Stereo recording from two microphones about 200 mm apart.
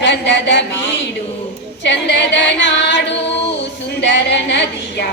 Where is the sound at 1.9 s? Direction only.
60° left (ahead or behind).